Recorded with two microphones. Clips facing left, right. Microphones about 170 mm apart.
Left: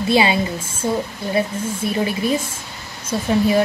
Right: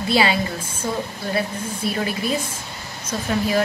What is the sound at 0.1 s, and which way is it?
Speech, 20° left (ahead or behind).